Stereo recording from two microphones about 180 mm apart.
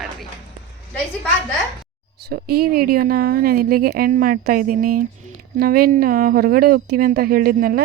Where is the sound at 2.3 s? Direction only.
60° right (ahead or behind).